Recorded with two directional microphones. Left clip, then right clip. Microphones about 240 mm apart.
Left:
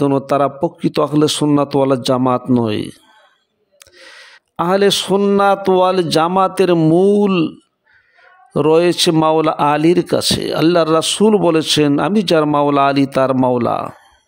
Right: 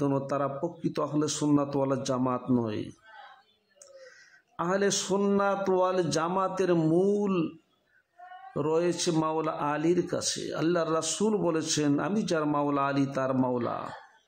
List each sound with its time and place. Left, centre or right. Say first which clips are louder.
0.0 s speech: left 14 dB; left
8.5 s speech: left 15 dB; left